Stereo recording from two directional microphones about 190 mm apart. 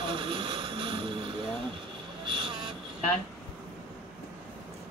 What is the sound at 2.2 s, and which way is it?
Vehicle, 25° right (ahead or behind).